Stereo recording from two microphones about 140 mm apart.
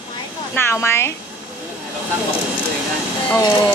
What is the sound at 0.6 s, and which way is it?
Speech, 15° left (ahead or behind).